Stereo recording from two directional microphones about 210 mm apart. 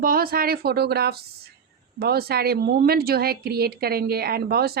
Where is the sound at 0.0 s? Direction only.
45° right (ahead or behind).